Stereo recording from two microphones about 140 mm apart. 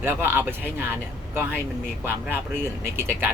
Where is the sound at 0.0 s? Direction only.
15° right (ahead or behind).